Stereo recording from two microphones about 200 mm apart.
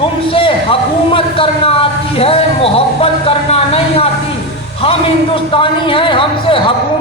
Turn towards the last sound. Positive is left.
turn(degrees=25)  # may be behind; listen again after turning